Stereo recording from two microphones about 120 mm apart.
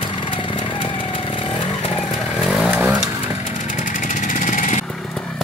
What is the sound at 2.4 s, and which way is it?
Chainsaw, centre (ahead or behind).